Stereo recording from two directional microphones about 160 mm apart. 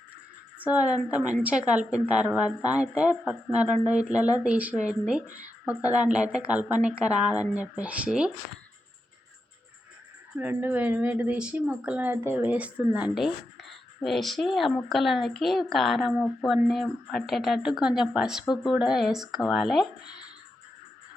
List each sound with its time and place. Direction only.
0.6 s a woman's voice: 10° right (ahead or behind)
10.3 s a woman's voice: 10° right (ahead or behind)
18.4 s speech: 25° left (ahead or behind)
18.7 s a woman's voice: 5° right (ahead or behind)